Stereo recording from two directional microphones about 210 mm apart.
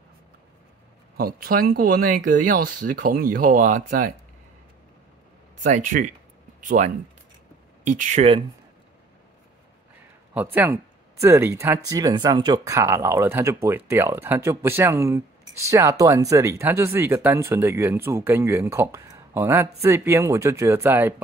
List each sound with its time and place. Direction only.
1.1 s speech: 45° right (ahead or behind)
5.6 s speech: 35° right (ahead or behind)
10.3 s speech: 10° right (ahead or behind)